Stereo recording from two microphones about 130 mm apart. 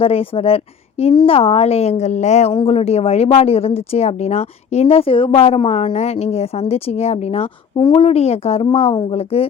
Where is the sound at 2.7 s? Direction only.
55° left (ahead or behind).